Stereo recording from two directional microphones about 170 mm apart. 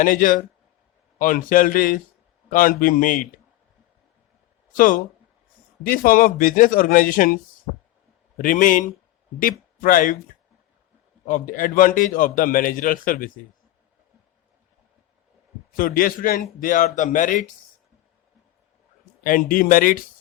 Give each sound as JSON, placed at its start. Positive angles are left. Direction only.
{"t": 0.0, "sound": "a man's voice", "side_deg": 50}
{"t": 5.8, "sound": "a man's voice", "side_deg": 55}
{"t": 8.4, "sound": "a man's voice", "side_deg": 55}
{"t": 11.3, "sound": "a man's voice", "side_deg": 50}
{"t": 15.7, "sound": "a man's voice", "side_deg": 55}
{"t": 19.2, "sound": "a man's voice", "side_deg": 55}